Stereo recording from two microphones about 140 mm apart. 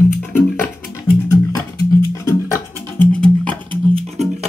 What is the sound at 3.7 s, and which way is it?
Music, 45° right (ahead or behind).